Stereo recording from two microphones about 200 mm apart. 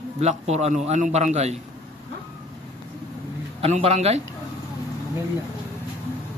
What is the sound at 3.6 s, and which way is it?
Speech, 30° right (ahead or behind).